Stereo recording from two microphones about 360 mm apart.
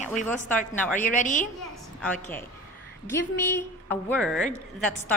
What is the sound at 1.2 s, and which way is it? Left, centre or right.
Speech, left.